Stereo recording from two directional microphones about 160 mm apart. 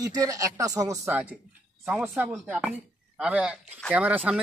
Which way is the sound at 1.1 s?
5° right (ahead or behind).